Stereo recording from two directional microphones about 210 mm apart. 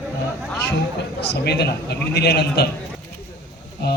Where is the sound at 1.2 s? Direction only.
50° left (ahead or behind).